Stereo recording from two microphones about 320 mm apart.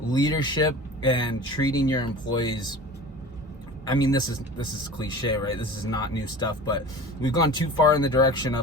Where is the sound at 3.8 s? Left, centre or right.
Centre.